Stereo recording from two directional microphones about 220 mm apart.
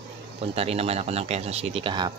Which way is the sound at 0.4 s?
25° right (ahead or behind).